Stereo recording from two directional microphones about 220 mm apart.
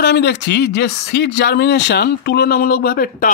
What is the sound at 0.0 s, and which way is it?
Speech, 50° left (ahead or behind).